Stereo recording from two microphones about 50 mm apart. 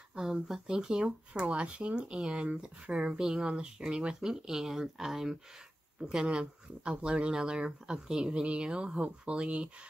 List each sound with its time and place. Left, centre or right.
0.1 s speech: centre